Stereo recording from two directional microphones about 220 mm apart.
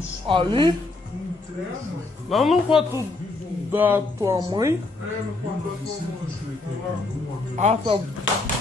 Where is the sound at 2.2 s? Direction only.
Centre (ahead or behind).